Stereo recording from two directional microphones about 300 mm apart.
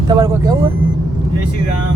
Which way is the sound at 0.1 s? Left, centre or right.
Centre.